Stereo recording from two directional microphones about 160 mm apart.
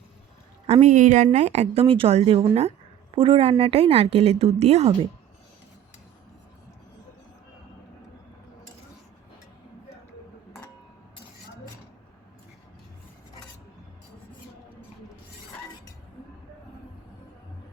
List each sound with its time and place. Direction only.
0.7 s a woman's voice: 45° right (ahead or behind)